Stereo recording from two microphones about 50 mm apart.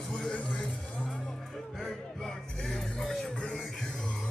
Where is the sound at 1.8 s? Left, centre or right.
Centre.